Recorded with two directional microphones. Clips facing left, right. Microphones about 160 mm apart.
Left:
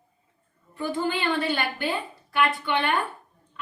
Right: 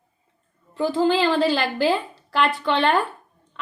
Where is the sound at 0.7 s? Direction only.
90° right.